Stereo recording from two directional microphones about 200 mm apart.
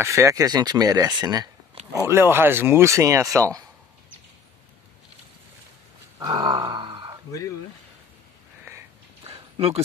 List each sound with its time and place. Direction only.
0.0 s speech: 15° right (ahead or behind)
6.1 s grunt: 20° right (ahead or behind)
9.2 s a sound: 30° right (ahead or behind)